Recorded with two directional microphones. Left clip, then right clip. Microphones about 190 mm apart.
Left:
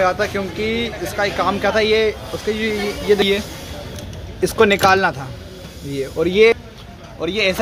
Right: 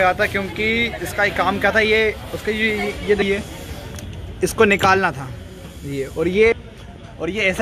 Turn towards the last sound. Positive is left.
turn(degrees=10)  # may be behind; listen again after turning